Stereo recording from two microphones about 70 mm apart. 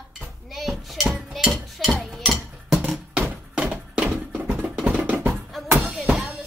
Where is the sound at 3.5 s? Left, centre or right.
Centre.